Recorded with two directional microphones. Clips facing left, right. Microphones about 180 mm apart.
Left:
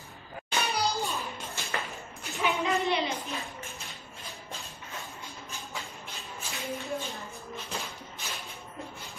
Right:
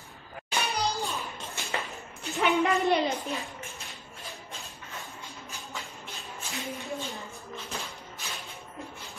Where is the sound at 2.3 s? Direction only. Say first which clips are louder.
Right 4 dB; 60° right (ahead or behind).